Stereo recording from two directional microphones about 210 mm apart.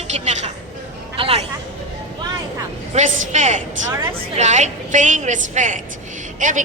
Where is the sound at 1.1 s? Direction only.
25° right (ahead or behind).